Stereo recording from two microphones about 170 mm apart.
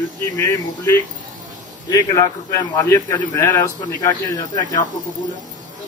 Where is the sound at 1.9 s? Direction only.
20° left (ahead or behind).